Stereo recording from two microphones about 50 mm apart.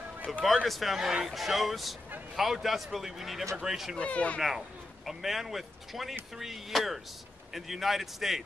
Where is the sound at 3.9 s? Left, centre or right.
Left.